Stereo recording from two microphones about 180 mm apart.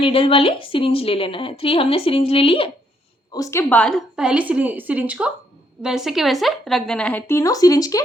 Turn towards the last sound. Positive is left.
turn(degrees=20)  # may be behind; listen again after turning